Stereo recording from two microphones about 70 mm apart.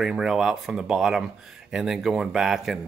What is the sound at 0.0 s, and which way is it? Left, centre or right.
Speech, centre.